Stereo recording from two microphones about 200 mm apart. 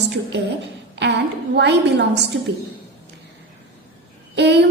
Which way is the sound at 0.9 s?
60° right (ahead or behind).